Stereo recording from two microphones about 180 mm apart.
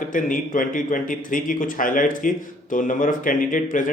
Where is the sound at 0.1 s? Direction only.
50° left (ahead or behind).